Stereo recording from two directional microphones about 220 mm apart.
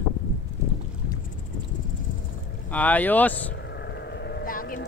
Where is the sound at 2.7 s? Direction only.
5° left (ahead or behind).